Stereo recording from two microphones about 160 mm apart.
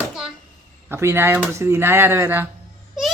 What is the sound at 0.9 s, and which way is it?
Speech, 15° right (ahead or behind).